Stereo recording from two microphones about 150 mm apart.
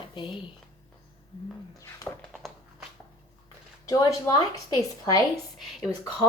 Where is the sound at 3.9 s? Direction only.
25° left (ahead or behind).